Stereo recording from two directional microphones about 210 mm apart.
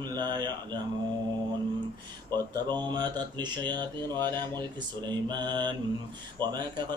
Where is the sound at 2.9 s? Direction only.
20° right (ahead or behind).